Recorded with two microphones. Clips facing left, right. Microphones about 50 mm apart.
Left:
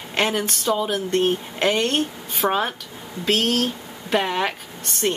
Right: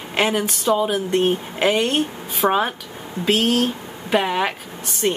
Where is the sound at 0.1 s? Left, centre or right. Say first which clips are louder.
Right 2 dB; centre.